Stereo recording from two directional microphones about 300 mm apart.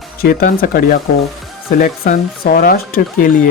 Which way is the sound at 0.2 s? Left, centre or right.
Left.